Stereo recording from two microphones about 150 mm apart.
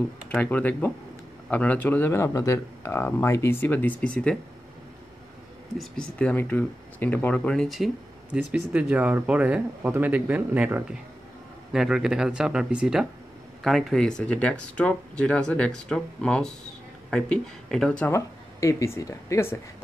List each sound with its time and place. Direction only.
0.3 s speech: 10° left (ahead or behind)
5.8 s speech: 5° left (ahead or behind)
18.1 s speech: 20° left (ahead or behind)